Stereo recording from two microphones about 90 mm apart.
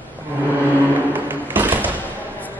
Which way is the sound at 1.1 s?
20° right (ahead or behind).